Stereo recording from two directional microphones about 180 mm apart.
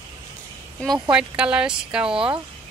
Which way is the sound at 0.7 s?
Centre (ahead or behind).